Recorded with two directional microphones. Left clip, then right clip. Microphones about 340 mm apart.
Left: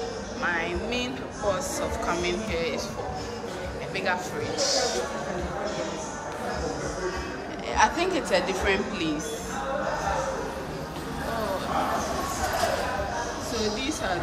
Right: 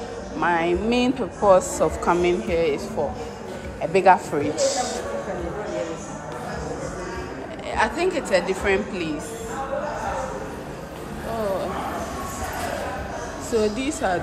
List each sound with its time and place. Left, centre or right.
0.4 s speech: centre
3.9 s speech: centre
7.7 s speech: centre
13.7 s speech: centre